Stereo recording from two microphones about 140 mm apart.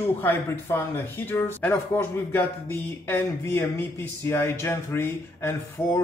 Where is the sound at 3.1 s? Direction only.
15° left (ahead or behind).